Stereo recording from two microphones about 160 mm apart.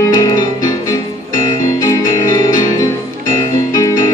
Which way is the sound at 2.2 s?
20° left (ahead or behind).